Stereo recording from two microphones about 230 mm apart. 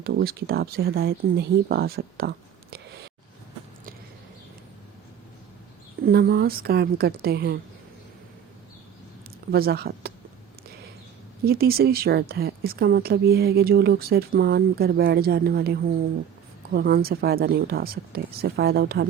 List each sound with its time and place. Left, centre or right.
0.0 s a woman's voice: right
6.1 s speech: right
9.5 s speech: right
11.4 s a woman's voice: right